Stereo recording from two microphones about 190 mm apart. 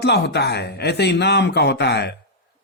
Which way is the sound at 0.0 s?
60° left (ahead or behind).